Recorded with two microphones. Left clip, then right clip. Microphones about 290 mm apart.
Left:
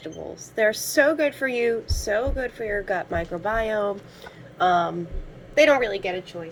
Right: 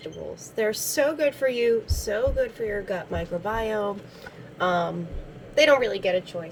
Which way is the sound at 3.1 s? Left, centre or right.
Right.